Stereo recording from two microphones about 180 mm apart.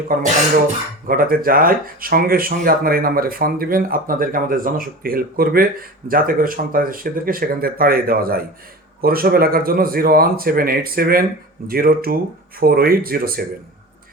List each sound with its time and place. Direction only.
1.0 s speech: 50° right (ahead or behind)